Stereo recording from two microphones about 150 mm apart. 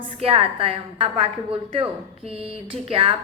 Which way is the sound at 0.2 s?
40° right (ahead or behind).